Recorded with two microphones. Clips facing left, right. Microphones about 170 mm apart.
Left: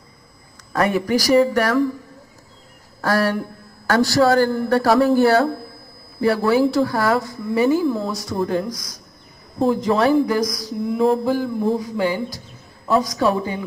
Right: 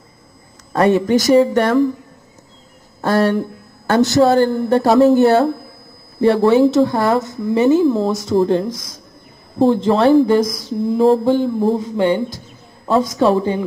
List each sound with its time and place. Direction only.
0.7 s speech: 25° right (ahead or behind)
3.0 s speech: 25° right (ahead or behind)